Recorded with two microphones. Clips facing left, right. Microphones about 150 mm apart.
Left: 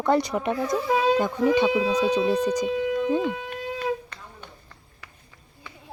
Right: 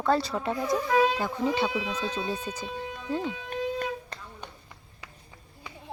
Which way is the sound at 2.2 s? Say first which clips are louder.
Left 10 dB; 80° left.